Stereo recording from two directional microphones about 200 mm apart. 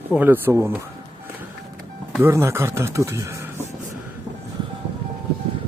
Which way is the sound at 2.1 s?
15° right (ahead or behind).